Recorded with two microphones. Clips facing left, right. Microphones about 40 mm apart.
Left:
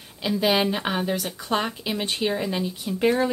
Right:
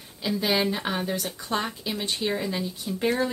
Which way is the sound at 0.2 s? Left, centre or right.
Centre.